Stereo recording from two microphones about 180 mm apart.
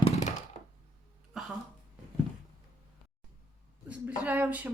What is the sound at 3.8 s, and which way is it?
Speech, 10° right (ahead or behind).